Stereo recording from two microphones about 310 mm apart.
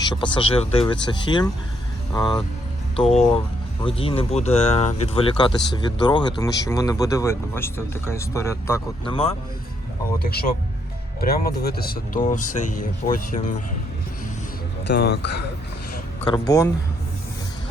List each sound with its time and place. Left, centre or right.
0.0 s speech: centre
10.2 s speech: left
14.8 s speech: left
16.2 s speech: centre